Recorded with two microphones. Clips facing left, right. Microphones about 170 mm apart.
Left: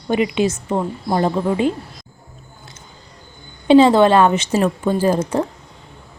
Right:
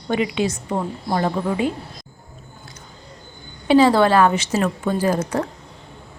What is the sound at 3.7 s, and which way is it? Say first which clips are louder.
A woman's voice: left 4 dB; 25° left (ahead or behind).